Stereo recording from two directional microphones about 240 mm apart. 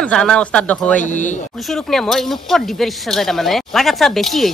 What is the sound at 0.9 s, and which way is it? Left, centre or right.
Speech, left.